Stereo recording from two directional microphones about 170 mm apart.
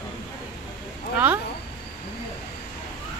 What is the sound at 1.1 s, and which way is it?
Speech, 10° right (ahead or behind).